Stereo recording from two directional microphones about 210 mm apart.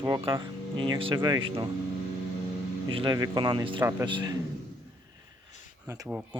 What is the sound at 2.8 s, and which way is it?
Speech, 25° right (ahead or behind).